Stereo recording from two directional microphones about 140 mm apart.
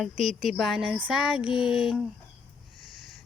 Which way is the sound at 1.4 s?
40° left (ahead or behind).